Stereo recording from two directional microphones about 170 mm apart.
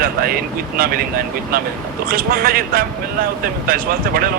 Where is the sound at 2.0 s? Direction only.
60° right (ahead or behind).